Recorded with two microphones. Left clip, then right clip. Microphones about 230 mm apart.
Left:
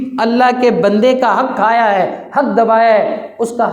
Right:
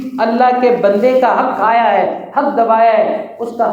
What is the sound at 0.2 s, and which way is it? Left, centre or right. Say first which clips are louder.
Speech: even; left.